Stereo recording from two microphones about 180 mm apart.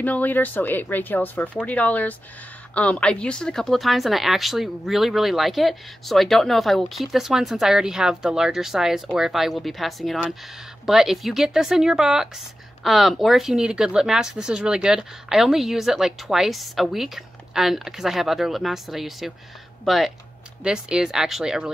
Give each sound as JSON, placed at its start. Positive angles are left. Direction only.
{"t": 0.0, "sound": "a woman's voice", "side_deg": 10}